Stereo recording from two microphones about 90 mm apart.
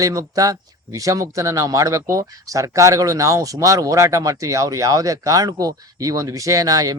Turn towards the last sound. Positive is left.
turn(degrees=-45)  # may be behind; listen again after turning